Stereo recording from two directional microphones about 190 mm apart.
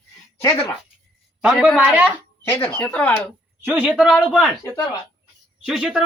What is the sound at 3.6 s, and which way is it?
Speech, 10° right (ahead or behind).